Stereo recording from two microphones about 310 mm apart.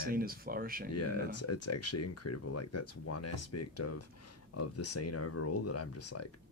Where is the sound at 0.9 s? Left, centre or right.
Left.